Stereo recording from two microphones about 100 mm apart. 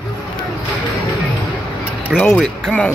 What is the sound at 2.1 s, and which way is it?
Speech, 15° left (ahead or behind).